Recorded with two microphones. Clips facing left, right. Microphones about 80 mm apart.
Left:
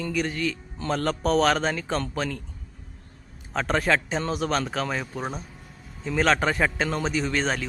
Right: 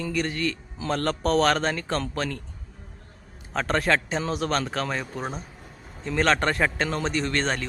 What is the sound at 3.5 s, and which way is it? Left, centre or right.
A man's voice, centre.